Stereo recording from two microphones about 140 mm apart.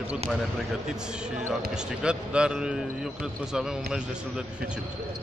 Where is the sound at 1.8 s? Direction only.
5° right (ahead or behind).